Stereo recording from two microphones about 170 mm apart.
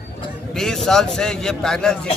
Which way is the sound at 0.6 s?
5° left (ahead or behind).